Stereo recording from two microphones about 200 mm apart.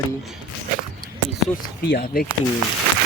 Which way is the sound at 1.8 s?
50° left (ahead or behind).